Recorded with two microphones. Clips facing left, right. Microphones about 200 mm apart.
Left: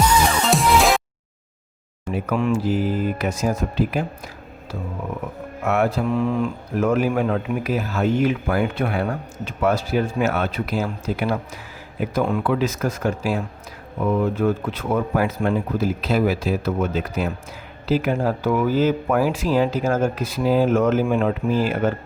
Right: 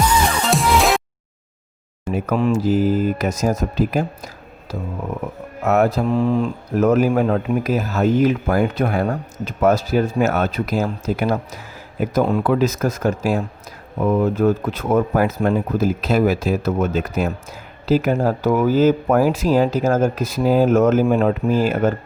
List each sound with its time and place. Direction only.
0.0 s music: 5° right (ahead or behind)
2.1 s speech: 40° right (ahead or behind)
5.6 s speech: 40° right (ahead or behind)